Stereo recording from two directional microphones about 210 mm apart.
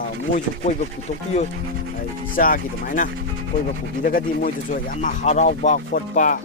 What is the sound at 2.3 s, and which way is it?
Speech, 40° left (ahead or behind).